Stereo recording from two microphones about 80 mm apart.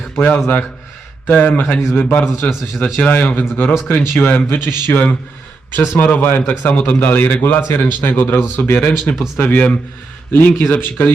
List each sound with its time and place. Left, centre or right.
0.2 s a man's voice: centre
2.4 s a man's voice: centre
3.0 s a man's voice: centre
9.1 s a man's voice: centre
9.4 s a man's voice: left